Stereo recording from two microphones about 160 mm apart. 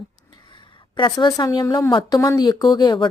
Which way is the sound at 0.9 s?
30° left (ahead or behind).